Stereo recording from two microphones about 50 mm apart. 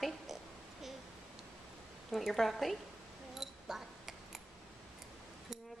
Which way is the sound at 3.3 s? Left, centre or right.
Centre.